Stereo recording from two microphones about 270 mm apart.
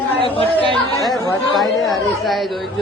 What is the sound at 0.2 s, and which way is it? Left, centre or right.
Speech, centre.